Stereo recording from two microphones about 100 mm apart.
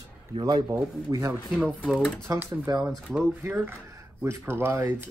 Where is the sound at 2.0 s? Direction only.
10° left (ahead or behind).